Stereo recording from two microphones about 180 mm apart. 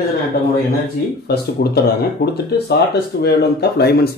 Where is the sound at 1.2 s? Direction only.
60° left (ahead or behind).